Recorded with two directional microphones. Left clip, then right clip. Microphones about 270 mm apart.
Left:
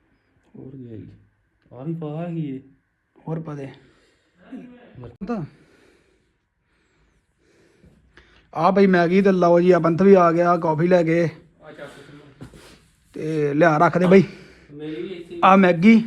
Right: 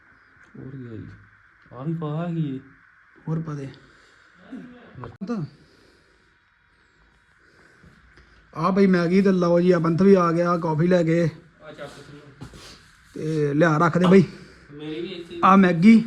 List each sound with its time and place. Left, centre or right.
1.7 s speech: right
3.2 s a man's voice: centre
8.1 s a man's voice: centre
13.1 s a man's voice: centre